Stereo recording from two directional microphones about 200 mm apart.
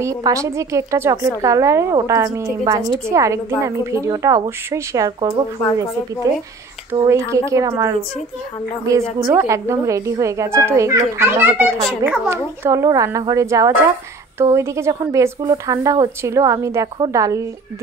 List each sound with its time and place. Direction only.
0.0 s a woman's voice: 15° right (ahead or behind)
9.2 s a woman's voice: 15° right (ahead or behind)